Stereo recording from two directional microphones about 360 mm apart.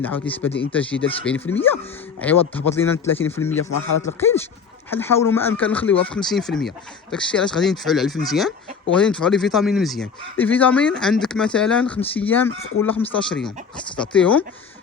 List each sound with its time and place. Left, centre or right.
0.0 s speech: centre
3.7 s speech: left
4.2 s speech: centre
14.0 s speech: centre